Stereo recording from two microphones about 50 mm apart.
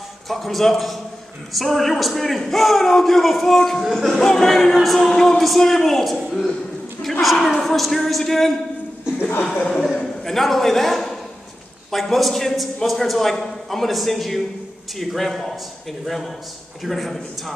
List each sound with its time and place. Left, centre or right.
0.3 s a man's voice: centre
9.4 s speech: left
10.2 s a man's voice: centre
16.8 s a man's voice: centre